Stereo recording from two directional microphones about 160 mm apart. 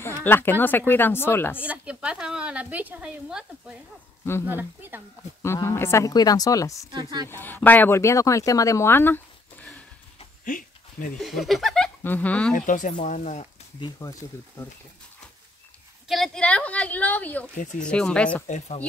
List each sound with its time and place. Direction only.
0.0 s speech: 15° left (ahead or behind)
1.6 s a woman's voice: 10° right (ahead or behind)
5.4 s a woman's voice: 20° left (ahead or behind)
6.9 s speech: 25° right (ahead or behind)
7.2 s speech: 15° left (ahead or behind)
10.4 s a sound: 60° left (ahead or behind)
11.1 s speech: centre (ahead or behind)
12.5 s speech: 55° left (ahead or behind)
13.7 s a woman's voice: 25° left (ahead or behind)
16.1 s speech: 5° left (ahead or behind)